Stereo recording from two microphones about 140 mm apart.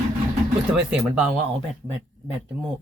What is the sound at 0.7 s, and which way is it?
Speech, 5° right (ahead or behind).